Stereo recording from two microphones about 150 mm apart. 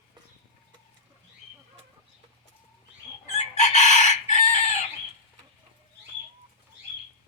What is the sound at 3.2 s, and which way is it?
Chicken, 50° left (ahead or behind).